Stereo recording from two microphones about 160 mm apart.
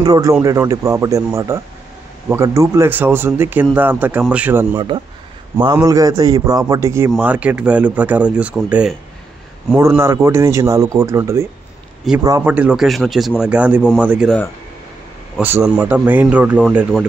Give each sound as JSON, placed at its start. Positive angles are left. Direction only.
{"t": 0.0, "sound": "speech", "side_deg": -20}
{"t": 4.7, "sound": "speech", "side_deg": -30}
{"t": 12.4, "sound": "speech", "side_deg": -10}
{"t": 15.4, "sound": "speech", "side_deg": -15}